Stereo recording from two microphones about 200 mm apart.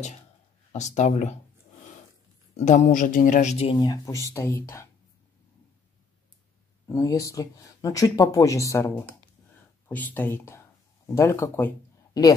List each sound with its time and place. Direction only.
0.7 s speech: 35° left (ahead or behind)
2.5 s speech: 35° left (ahead or behind)
3.7 s speech: 20° left (ahead or behind)
6.9 s speech: 15° left (ahead or behind)